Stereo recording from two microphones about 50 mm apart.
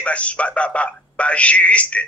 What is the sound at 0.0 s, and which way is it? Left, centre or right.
A man's voice, left.